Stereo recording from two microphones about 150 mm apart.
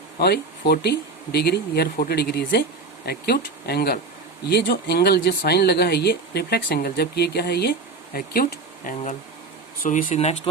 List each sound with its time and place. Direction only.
0.2 s speech: 90° left; by 10.3 s 50° left (ahead or behind)